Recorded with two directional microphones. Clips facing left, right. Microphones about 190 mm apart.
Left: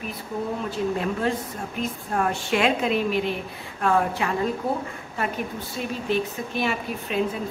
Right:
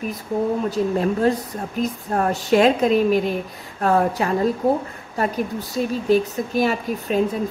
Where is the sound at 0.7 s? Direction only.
40° right (ahead or behind).